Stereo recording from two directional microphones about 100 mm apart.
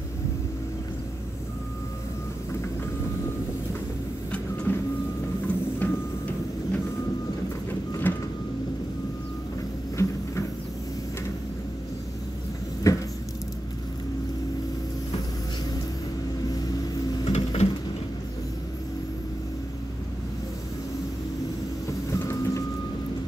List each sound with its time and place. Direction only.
4.7 s music: 20° left (ahead or behind)
8.1 s vehicle: 20° left (ahead or behind)
10.0 s a sound: 30° left (ahead or behind)
12.9 s a sound: 30° left (ahead or behind)
17.2 s printer: 85° left
21.8 s vehicle: 30° left (ahead or behind)